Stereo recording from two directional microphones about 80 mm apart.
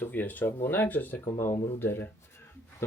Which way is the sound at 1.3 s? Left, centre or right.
Left.